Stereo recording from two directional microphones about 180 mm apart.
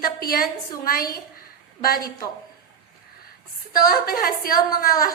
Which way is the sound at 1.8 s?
55° left (ahead or behind).